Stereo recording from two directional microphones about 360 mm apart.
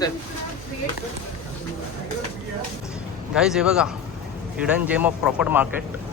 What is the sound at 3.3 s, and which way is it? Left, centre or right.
A man's voice, centre.